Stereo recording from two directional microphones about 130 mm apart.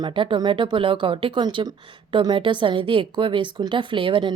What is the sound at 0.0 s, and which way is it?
Speech, 40° right (ahead or behind).